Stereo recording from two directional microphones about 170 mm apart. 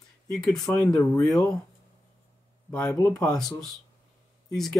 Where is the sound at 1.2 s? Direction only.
20° left (ahead or behind).